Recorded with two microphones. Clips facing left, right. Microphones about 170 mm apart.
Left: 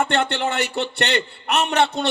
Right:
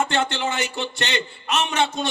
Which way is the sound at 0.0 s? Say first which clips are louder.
Left 2 dB; 60° left (ahead or behind).